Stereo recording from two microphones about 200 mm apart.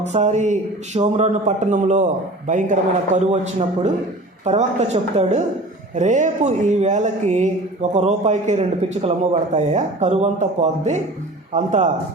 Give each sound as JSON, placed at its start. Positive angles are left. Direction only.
{"t": 0.0, "sound": "speech", "side_deg": -35}